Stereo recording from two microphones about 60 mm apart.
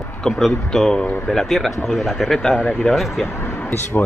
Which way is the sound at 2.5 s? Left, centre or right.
Centre.